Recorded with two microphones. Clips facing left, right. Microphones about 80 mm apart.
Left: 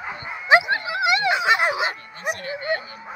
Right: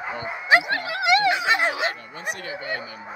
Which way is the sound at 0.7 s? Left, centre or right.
Centre.